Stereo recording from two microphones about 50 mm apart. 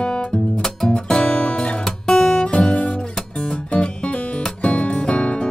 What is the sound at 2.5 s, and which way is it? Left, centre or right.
Music, left.